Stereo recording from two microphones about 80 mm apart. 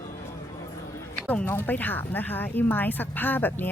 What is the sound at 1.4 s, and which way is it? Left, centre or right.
Speech, left.